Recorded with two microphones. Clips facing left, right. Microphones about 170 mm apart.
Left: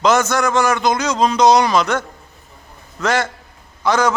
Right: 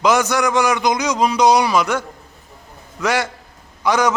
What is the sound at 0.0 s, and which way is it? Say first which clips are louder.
A man's voice: left 1 dB; 15° right (ahead or behind).